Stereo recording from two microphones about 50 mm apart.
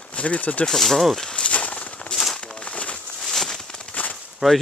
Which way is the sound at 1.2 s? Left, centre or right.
Left.